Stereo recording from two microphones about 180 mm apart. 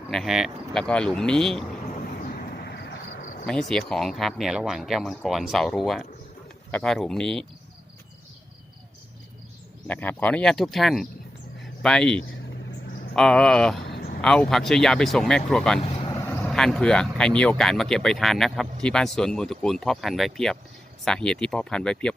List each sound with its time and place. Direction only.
0.1 s speech: centre (ahead or behind)
2.3 s vehicle: 65° left (ahead or behind)
3.4 s speech: 5° left (ahead or behind)
9.8 s speech: 10° left (ahead or behind)
13.8 s a sound: 65° left (ahead or behind)
14.2 s speech: 5° left (ahead or behind)
15.8 s vehicle: 30° left (ahead or behind)
16.4 s speech: 5° left (ahead or behind)